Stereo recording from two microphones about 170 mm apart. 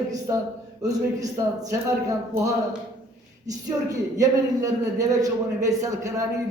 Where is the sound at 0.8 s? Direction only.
20° right (ahead or behind).